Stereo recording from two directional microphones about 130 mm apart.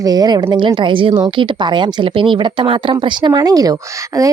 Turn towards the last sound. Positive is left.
turn(degrees=-25)  # may be behind; listen again after turning